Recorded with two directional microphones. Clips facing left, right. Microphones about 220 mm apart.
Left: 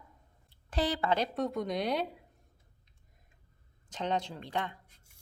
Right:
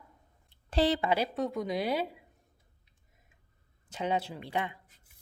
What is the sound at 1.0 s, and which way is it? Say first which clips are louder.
Speech: right 1 dB; 10° right (ahead or behind).